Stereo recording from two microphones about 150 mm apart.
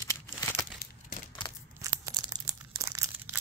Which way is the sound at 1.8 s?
25° right (ahead or behind).